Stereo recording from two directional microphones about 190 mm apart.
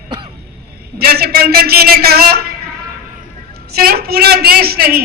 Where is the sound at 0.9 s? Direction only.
55° right (ahead or behind).